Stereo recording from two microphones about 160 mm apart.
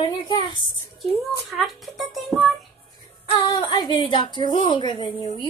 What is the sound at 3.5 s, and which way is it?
A woman's voice, 30° left (ahead or behind).